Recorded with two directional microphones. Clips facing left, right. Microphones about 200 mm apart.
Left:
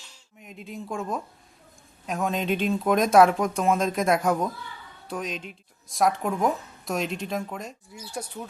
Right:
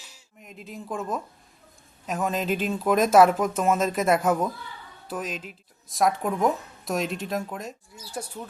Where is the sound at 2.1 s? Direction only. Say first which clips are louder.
Even; centre (ahead or behind).